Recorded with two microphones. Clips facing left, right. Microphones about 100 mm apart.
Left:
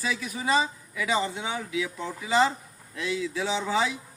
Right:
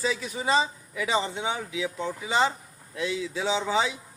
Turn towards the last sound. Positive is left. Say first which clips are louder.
# right 1 dB
turn(degrees=-20)  # may be behind; listen again after turning